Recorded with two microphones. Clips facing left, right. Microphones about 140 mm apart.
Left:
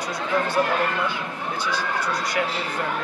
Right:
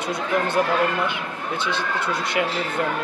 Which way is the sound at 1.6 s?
25° right (ahead or behind).